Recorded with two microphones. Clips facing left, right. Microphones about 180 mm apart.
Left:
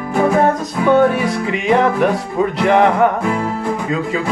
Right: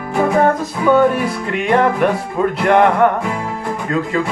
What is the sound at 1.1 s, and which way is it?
Music, centre (ahead or behind).